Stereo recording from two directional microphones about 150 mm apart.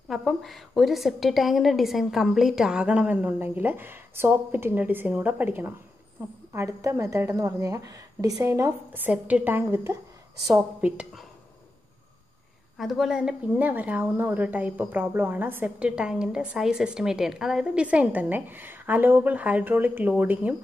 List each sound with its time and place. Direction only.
0.1 s a woman's voice: centre (ahead or behind)
12.7 s a woman's voice: centre (ahead or behind)